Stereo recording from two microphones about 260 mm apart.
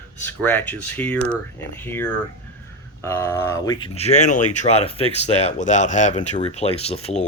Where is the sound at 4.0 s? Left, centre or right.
Left.